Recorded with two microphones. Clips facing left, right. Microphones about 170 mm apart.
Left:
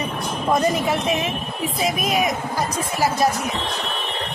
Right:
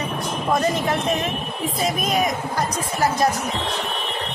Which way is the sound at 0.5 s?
15° left (ahead or behind).